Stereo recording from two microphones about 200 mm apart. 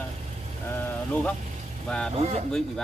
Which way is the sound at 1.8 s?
5° left (ahead or behind).